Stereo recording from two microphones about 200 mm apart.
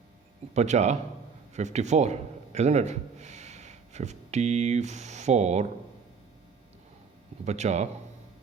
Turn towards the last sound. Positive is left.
turn(degrees=-35)  # may be behind; listen again after turning